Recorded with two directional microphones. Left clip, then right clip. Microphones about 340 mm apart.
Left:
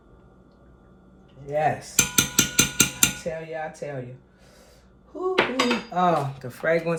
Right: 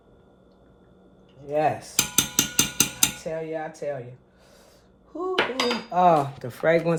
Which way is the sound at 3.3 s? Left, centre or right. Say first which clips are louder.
Right 1 dB; centre.